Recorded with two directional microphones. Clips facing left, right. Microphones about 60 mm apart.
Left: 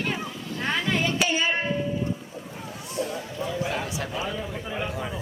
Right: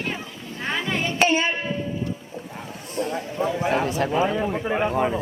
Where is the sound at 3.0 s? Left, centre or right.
Right.